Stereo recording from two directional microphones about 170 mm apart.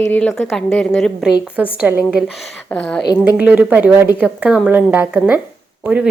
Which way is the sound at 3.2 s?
10° right (ahead or behind).